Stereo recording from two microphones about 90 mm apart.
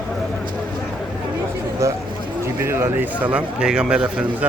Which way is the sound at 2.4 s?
25° right (ahead or behind).